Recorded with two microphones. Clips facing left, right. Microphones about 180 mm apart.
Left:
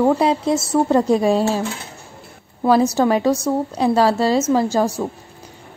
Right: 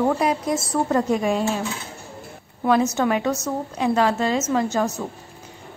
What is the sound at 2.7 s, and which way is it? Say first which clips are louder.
A woman's voice: left 4 dB; 35° left (ahead or behind).